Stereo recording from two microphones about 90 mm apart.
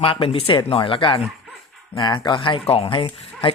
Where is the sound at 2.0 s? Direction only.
55° left (ahead or behind); by 3.5 s 75° left (ahead or behind).